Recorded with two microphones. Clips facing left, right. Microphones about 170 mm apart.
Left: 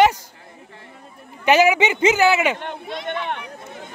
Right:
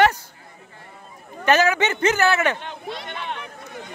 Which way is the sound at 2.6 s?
55° left (ahead or behind).